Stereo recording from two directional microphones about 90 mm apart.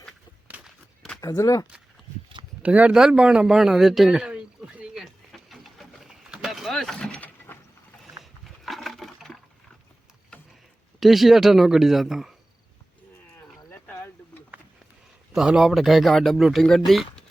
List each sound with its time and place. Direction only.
1.4 s speech: 35° left (ahead or behind)
2.6 s speech: 15° right (ahead or behind)
5.0 s pigeon: centre (ahead or behind)
7.5 s vehicle: 25° left (ahead or behind)
8.2 s a sound: centre (ahead or behind)
11.0 s speech: centre (ahead or behind)
13.7 s a sound: 25° left (ahead or behind)
15.4 s speech: 5° right (ahead or behind)